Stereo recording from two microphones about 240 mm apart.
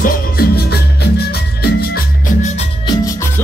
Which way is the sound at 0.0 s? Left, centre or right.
Left.